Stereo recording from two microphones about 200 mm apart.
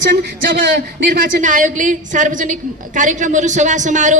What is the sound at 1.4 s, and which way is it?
A woman's voice, 40° right (ahead or behind).